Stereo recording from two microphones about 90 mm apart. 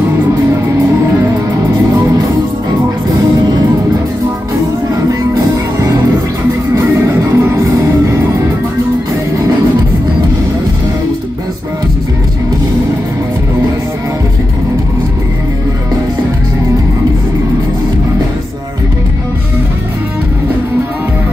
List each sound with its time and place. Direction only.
7.2 s music: 35° right (ahead or behind)